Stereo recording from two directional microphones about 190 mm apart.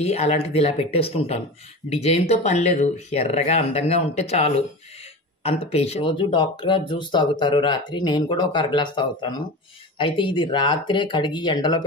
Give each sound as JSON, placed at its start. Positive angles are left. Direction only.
{"t": 0.0, "sound": "speech", "side_deg": 35}